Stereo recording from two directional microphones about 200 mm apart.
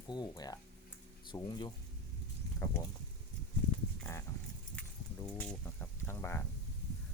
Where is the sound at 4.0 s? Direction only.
15° left (ahead or behind).